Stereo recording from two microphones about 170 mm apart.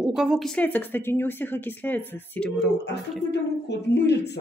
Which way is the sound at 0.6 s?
10° left (ahead or behind).